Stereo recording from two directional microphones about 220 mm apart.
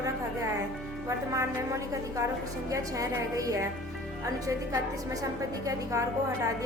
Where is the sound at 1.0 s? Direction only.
15° right (ahead or behind).